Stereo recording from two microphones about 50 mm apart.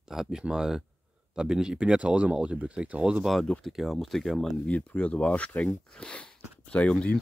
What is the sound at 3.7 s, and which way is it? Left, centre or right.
Speech, centre.